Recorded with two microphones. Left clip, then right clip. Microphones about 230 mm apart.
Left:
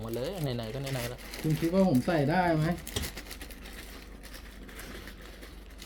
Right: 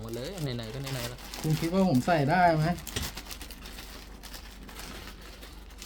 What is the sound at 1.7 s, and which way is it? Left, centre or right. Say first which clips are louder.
Speech: right 2 dB; right.